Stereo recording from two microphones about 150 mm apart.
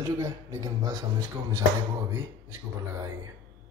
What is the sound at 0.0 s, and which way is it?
A man's voice, 20° right (ahead or behind).